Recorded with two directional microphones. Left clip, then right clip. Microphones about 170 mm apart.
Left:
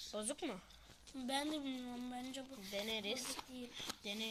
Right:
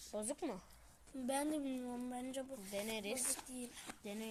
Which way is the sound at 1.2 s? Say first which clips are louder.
Right 1 dB; 45° right (ahead or behind).